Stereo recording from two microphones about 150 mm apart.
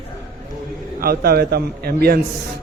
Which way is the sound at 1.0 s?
85° right.